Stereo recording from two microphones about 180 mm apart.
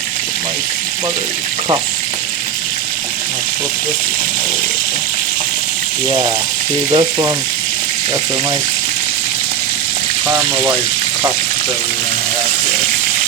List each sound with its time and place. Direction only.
6.1 s frying: 25° right (ahead or behind)
10.2 s speech: 15° right (ahead or behind)